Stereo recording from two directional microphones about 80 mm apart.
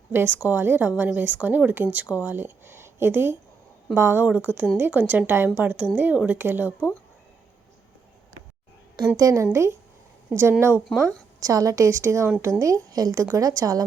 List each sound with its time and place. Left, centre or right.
0.1 s a woman's voice: right
9.1 s a woman's voice: right
11.3 s a woman's voice: right